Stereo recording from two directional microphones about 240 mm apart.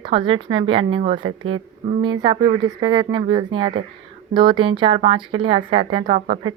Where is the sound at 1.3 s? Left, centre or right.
Right.